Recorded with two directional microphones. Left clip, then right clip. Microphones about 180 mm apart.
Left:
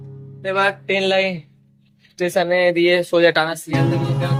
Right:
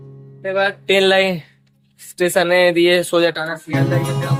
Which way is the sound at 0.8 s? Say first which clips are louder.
Right 4 dB; 25° right (ahead or behind).